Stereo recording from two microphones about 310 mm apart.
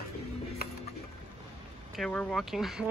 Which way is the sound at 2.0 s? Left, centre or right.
Centre.